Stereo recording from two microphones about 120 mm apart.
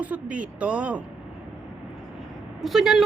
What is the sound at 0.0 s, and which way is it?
Speech, 10° right (ahead or behind).